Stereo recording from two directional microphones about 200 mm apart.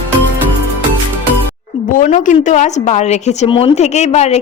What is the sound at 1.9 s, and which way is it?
A woman's voice, 40° left (ahead or behind).